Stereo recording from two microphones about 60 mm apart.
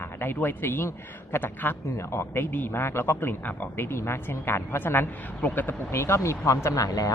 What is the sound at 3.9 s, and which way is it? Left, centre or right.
A woman's voice, left.